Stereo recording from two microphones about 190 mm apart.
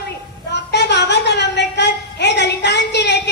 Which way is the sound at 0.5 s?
65° left (ahead or behind).